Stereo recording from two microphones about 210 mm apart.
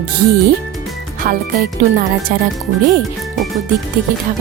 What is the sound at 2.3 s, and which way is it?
Speech, 45° right (ahead or behind).